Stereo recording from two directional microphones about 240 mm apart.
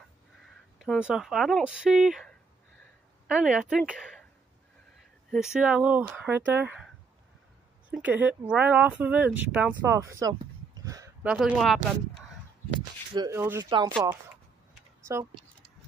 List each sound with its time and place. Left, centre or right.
0.7 s speech: centre
5.3 s speech: centre
7.9 s speech: centre
10.4 s a sound: centre
11.3 s speech: centre
13.1 s speech: centre